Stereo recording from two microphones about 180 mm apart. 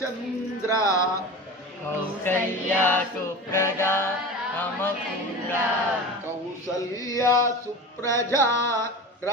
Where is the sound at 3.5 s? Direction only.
15° left (ahead or behind).